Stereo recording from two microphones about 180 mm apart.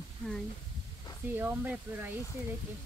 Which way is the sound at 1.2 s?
10° right (ahead or behind).